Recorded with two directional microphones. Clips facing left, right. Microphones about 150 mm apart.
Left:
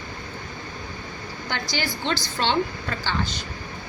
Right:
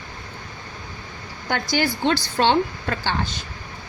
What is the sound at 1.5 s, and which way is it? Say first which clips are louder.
A woman's voice: right 7 dB; 50° right (ahead or behind).